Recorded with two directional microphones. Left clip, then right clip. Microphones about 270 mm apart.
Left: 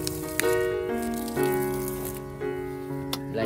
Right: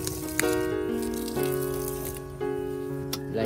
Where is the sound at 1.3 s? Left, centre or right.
Centre.